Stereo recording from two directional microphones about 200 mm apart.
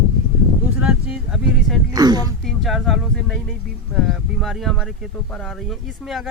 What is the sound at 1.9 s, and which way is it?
Speech, 20° right (ahead or behind).